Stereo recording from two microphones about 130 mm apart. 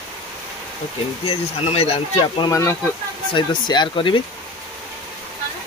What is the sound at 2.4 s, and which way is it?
Speech, 20° left (ahead or behind).